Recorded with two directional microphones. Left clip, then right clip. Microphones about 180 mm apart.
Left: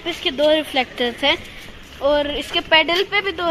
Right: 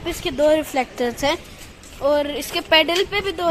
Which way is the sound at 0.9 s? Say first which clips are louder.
Left 3 dB; 10° right (ahead or behind).